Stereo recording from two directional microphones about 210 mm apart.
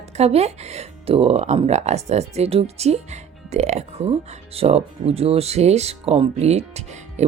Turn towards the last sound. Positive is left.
turn(degrees=-30)  # may be behind; listen again after turning